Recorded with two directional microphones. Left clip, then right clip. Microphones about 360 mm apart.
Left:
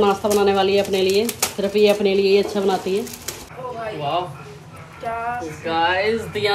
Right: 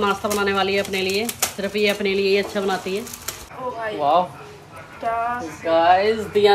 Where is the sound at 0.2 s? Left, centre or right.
Centre.